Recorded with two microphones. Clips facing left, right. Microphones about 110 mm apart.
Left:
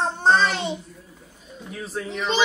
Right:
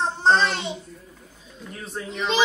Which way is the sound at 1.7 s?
Centre (ahead or behind).